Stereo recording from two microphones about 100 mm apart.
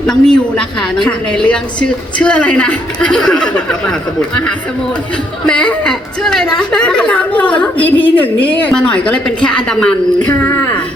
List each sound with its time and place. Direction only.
0.0 s a woman's voice: 5° left (ahead or behind)
5.5 s a woman's voice: 10° left (ahead or behind)
10.3 s speech: 25° left (ahead or behind)